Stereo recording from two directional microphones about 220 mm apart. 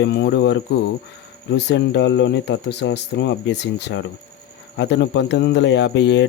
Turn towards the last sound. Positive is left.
turn(degrees=55)  # may be behind; listen again after turning